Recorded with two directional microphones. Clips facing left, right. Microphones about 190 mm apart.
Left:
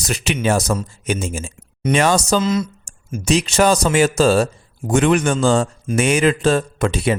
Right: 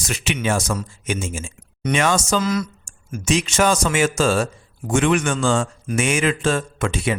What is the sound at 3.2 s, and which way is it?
Speech, 35° left (ahead or behind).